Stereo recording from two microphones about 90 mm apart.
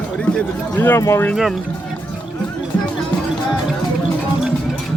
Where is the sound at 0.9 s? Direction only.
35° left (ahead or behind).